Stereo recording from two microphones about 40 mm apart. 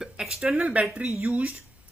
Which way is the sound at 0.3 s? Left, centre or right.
Right.